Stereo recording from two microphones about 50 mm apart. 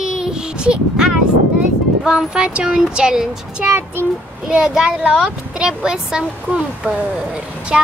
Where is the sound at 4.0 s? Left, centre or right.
Left.